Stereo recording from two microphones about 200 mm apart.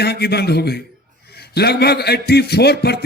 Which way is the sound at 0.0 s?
55° left (ahead or behind).